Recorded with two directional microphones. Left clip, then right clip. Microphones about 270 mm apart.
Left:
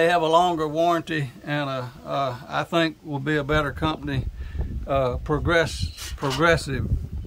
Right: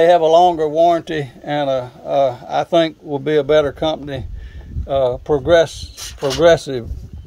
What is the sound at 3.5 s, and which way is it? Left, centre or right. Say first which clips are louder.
Speech: right 9 dB; left.